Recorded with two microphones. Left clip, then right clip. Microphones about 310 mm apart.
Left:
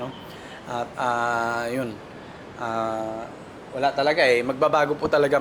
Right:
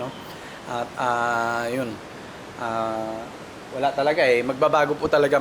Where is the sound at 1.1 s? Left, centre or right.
Centre.